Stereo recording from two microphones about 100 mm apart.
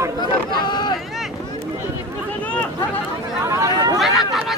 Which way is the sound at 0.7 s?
50° left (ahead or behind).